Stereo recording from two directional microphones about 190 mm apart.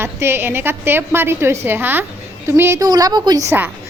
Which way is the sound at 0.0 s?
10° right (ahead or behind).